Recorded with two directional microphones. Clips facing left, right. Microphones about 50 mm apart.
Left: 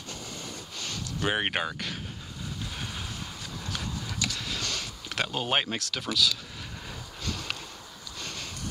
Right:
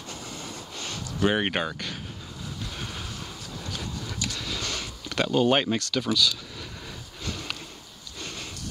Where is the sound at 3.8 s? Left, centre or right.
Centre.